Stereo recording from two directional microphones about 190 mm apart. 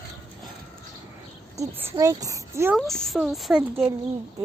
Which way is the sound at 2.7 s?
Centre (ahead or behind).